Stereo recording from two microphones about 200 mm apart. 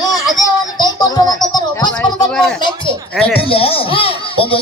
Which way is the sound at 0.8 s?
20° left (ahead or behind).